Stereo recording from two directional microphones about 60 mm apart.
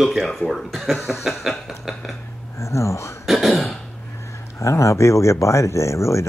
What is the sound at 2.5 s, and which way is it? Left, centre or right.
Speech, left.